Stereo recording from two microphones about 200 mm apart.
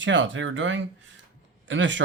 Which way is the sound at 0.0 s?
65° right (ahead or behind).